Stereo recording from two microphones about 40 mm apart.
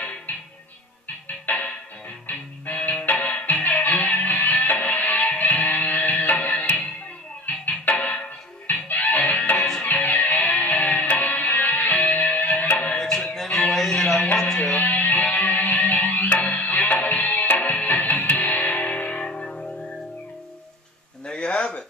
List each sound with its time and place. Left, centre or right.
0.3 s music: left
12.9 s music: centre
14.4 s music: left
19.2 s music: left
21.3 s a sound: left